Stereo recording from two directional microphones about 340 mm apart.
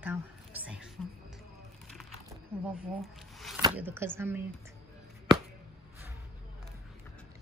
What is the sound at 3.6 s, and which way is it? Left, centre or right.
Speech, centre.